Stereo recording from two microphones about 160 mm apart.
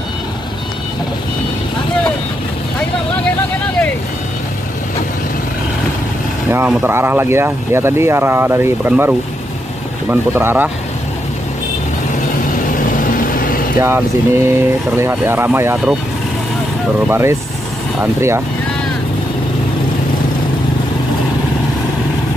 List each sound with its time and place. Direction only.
6.5 s speech: 15° right (ahead or behind)
12.7 s vehicle: 55° left (ahead or behind)
13.7 s speech: 15° right (ahead or behind)
17.1 s speech: 15° right (ahead or behind)